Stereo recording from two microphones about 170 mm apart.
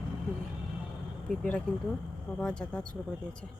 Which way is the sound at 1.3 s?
5° left (ahead or behind).